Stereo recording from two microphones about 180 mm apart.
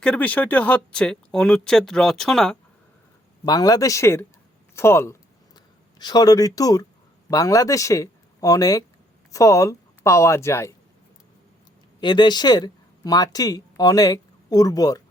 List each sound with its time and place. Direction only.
0.0 s speech: 10° left (ahead or behind)
3.4 s speech: 20° left (ahead or behind)
11.9 s speech: 25° left (ahead or behind)